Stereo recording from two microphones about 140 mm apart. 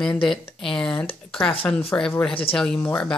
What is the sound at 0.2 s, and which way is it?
Speech, 5° left (ahead or behind).